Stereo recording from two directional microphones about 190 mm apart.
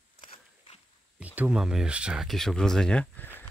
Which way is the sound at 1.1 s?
5° right (ahead or behind).